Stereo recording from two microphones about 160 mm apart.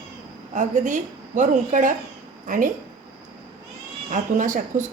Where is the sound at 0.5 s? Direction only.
50° right (ahead or behind).